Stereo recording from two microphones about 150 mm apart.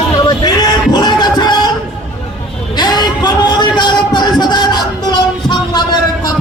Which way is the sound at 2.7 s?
30° left (ahead or behind).